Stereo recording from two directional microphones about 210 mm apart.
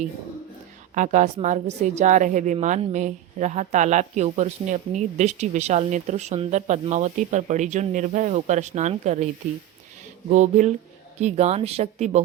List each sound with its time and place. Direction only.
0.9 s a woman's voice: 35° right (ahead or behind)